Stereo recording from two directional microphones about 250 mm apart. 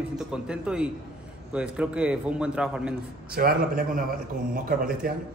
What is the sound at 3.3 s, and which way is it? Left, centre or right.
A man's voice, right.